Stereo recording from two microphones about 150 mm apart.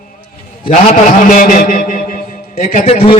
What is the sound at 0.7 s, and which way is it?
A man's voice, 60° left (ahead or behind).